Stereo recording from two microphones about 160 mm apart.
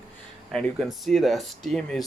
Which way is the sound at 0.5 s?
Centre (ahead or behind).